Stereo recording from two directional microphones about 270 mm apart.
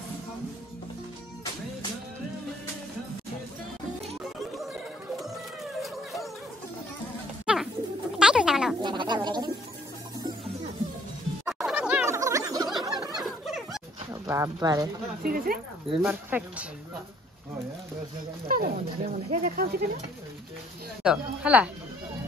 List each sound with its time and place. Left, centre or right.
5.1 s music: centre
7.5 s pigeon: centre
8.2 s a sound: centre
8.8 s a sound: centre
11.4 s snicker: centre
12.8 s a sound: centre
13.2 s a sound: centre
14.2 s speech: centre
15.2 s speech: right
15.9 s speech: centre
18.5 s speech: right
21.0 s speech: centre